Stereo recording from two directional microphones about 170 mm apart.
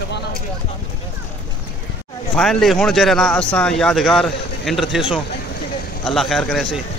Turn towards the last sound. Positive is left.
turn(degrees=0)  # may be behind; listen again after turning